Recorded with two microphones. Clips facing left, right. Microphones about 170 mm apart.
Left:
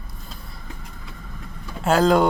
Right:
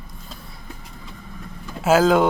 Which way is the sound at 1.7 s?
5° right (ahead or behind).